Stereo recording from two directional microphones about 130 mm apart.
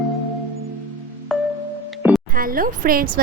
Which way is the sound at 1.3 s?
Centre (ahead or behind).